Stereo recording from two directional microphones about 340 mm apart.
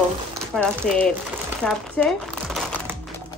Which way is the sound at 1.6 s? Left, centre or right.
Centre.